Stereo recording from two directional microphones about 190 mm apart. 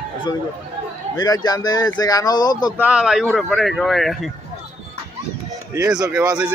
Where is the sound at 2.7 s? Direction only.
5° right (ahead or behind).